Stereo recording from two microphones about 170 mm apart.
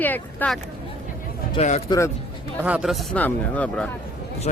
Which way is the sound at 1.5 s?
45° left (ahead or behind).